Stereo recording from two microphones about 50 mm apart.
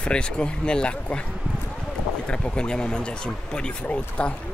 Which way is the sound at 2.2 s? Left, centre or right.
Centre.